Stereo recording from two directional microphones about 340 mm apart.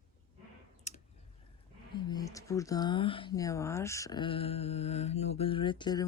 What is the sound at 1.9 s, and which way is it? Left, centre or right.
Speech, centre.